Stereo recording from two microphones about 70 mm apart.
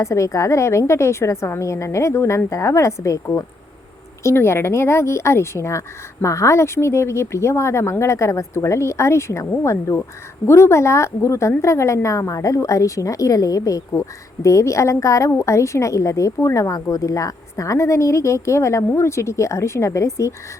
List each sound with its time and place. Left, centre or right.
0.0 s a woman's voice: left
13.9 s a woman's voice: left